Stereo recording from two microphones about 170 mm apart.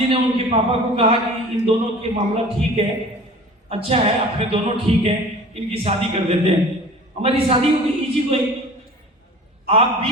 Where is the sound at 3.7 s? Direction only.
35° right (ahead or behind).